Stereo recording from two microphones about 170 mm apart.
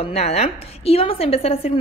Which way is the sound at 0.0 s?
40° left (ahead or behind).